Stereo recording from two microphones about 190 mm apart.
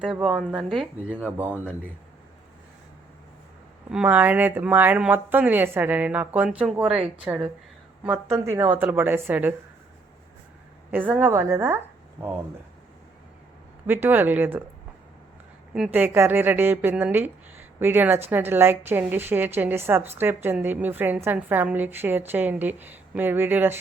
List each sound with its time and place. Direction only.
0.0 s speech: centre (ahead or behind)
3.9 s speech: 5° right (ahead or behind)
10.9 s speech: 10° right (ahead or behind)
13.8 s speech: 10° right (ahead or behind)
15.7 s speech: 5° right (ahead or behind)